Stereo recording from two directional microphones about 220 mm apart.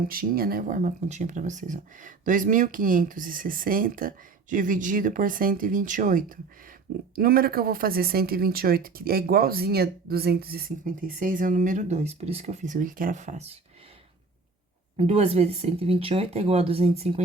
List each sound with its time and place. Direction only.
0.1 s speech: 40° right (ahead or behind)
14.9 s speech: 30° right (ahead or behind)